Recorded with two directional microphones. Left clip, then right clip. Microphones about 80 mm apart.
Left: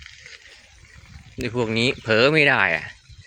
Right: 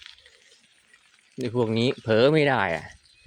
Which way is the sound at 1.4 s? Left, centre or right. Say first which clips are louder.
Left 2 dB; right.